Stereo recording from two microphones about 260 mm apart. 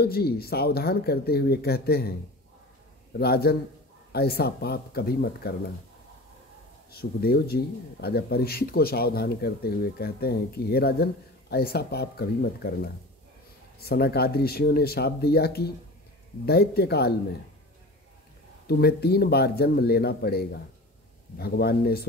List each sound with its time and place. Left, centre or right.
0.0 s speech: left
6.9 s speech: left
18.7 s speech: left